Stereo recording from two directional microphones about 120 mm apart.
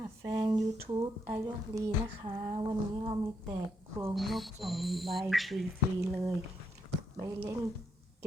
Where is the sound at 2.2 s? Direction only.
45° right (ahead or behind).